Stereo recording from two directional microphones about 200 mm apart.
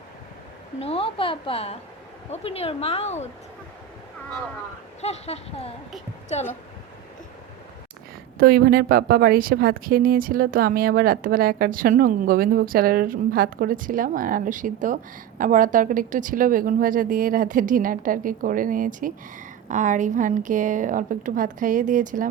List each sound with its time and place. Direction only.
0.8 s a woman's voice: 30° left (ahead or behind)
4.9 s a woman's voice: 30° left (ahead or behind)
8.4 s a woman's voice: 50° right (ahead or behind)